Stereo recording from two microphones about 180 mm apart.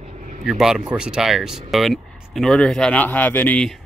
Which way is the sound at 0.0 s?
40° right (ahead or behind).